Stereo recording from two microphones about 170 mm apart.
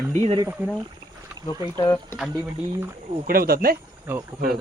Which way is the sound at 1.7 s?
15° left (ahead or behind).